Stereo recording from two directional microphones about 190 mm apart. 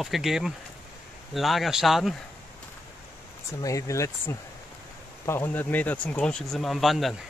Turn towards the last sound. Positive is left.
turn(degrees=0)  # may be behind; listen again after turning